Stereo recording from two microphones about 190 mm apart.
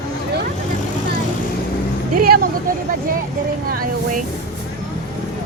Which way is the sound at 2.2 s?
55° right (ahead or behind).